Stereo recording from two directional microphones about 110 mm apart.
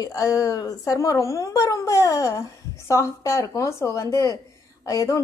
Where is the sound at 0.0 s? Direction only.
30° left (ahead or behind).